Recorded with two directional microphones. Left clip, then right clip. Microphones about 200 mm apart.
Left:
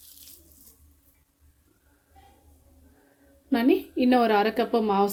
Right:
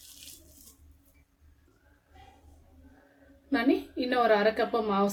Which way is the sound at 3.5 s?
50° left (ahead or behind).